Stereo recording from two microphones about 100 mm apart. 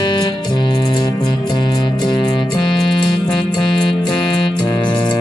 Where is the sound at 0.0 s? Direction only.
50° left (ahead or behind).